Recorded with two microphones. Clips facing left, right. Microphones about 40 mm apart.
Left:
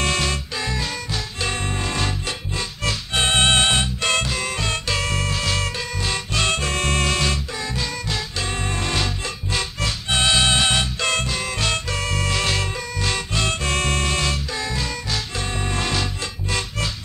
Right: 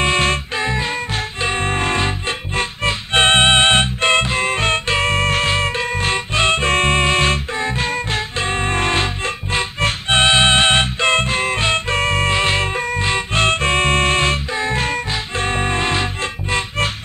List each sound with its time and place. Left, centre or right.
0.0 s music: right